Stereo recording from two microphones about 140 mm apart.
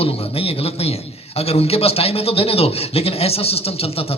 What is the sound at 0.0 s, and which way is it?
A man's voice, 45° left (ahead or behind).